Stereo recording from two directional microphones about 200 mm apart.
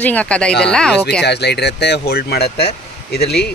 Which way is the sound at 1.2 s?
55° left (ahead or behind).